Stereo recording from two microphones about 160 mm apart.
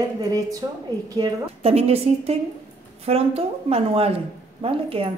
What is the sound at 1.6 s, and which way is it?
A woman's voice, 40° right (ahead or behind).